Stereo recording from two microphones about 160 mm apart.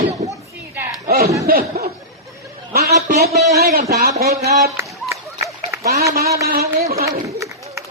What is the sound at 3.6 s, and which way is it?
Speech, 50° right (ahead or behind).